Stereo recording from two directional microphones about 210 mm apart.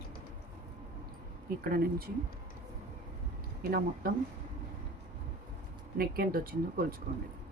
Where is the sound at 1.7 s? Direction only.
45° right (ahead or behind).